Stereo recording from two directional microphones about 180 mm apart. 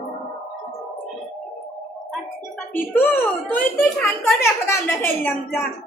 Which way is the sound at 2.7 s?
10° left (ahead or behind).